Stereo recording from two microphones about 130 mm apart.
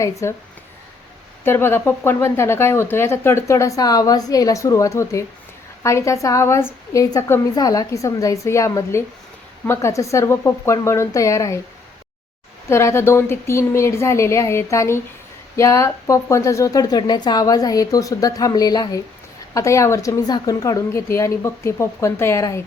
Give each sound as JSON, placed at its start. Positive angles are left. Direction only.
{"t": 0.0, "sound": "speech", "side_deg": 25}
{"t": 1.5, "sound": "speech", "side_deg": 20}
{"t": 12.6, "sound": "speech", "side_deg": 20}